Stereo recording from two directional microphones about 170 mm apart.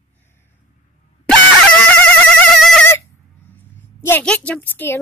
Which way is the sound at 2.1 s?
5° left (ahead or behind).